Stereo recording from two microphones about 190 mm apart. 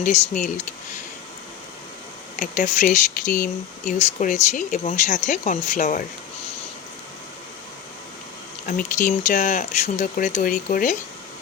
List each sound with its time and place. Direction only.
0.0 s speech: 40° left (ahead or behind)
2.3 s speech: 40° left (ahead or behind)
8.6 s speech: 45° left (ahead or behind)